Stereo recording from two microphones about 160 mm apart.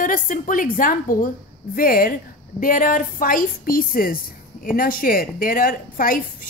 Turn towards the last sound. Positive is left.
turn(degrees=60)  # may be behind; listen again after turning